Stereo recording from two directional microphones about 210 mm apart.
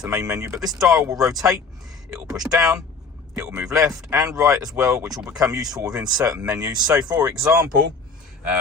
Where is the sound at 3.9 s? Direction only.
15° right (ahead or behind).